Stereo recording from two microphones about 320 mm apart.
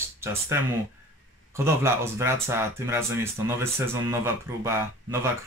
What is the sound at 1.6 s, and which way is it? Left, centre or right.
Speech, centre.